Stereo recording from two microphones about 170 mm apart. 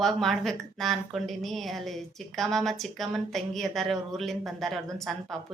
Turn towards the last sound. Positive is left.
turn(degrees=0)  # may be behind; listen again after turning